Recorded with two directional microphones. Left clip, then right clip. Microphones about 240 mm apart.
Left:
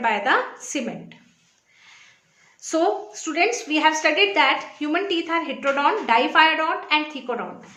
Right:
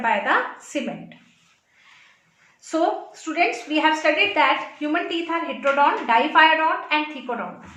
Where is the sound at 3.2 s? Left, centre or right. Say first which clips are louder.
Even; left.